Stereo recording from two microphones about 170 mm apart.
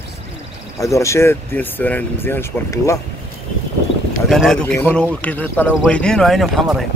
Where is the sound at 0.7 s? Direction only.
20° left (ahead or behind).